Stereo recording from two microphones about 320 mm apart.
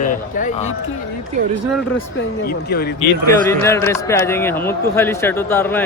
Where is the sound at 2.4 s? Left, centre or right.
Left.